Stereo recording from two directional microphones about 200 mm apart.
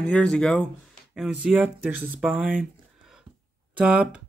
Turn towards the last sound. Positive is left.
turn(degrees=-5)  # may be behind; listen again after turning